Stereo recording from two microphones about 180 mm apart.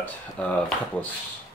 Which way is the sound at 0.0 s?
5° left (ahead or behind).